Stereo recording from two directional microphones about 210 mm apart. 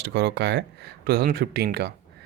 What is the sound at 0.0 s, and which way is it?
Speech, 55° right (ahead or behind).